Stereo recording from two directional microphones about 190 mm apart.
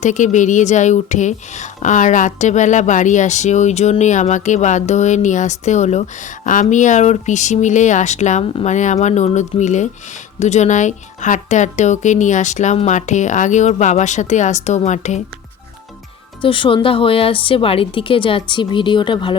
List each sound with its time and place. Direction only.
0.0 s speech: 40° left (ahead or behind)
16.4 s speech: 25° left (ahead or behind)